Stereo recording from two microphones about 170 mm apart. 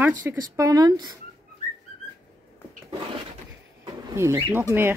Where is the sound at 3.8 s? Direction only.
20° right (ahead or behind).